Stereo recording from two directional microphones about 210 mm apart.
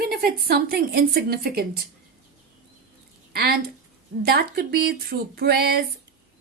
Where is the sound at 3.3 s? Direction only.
45° right (ahead or behind).